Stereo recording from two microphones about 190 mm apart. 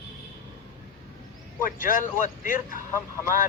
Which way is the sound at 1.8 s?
45° left (ahead or behind).